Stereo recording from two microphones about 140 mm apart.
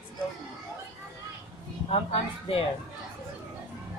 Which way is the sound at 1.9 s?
45° left (ahead or behind).